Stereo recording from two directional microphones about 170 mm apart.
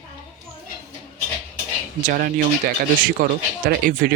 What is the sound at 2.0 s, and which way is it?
A man's voice, 50° right (ahead or behind).